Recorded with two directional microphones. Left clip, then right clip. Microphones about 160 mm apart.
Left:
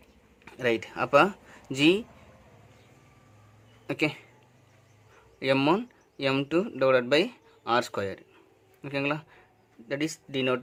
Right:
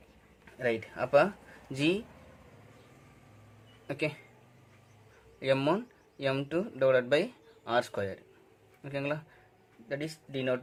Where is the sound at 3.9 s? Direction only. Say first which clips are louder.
Left 5 dB; 45° left (ahead or behind).